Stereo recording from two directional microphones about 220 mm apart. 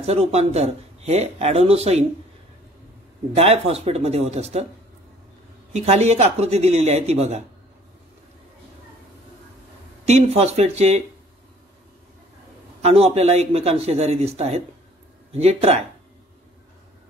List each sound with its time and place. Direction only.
0.0 s speech: 30° right (ahead or behind)
3.3 s speech: 30° right (ahead or behind)
5.7 s speech: 30° right (ahead or behind)
10.0 s speech: 30° right (ahead or behind)
12.8 s speech: 30° right (ahead or behind)